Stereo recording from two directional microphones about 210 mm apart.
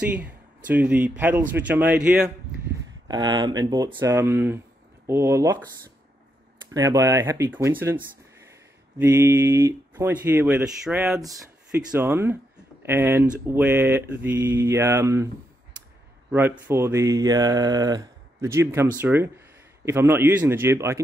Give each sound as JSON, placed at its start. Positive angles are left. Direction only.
{"t": 0.1, "sound": "speech", "side_deg": -5}
{"t": 3.1, "sound": "speech", "side_deg": -20}
{"t": 6.7, "sound": "speech", "side_deg": -15}
{"t": 9.0, "sound": "speech", "side_deg": -10}
{"t": 16.3, "sound": "speech", "side_deg": -10}